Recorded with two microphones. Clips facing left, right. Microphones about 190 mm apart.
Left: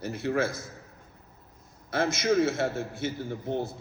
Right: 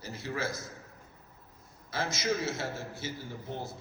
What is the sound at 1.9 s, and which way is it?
A man's voice, 55° left (ahead or behind).